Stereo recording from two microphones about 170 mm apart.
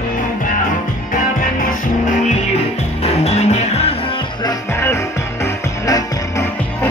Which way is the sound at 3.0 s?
40° left (ahead or behind).